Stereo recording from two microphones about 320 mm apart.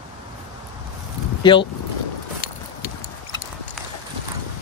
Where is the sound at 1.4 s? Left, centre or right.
Centre.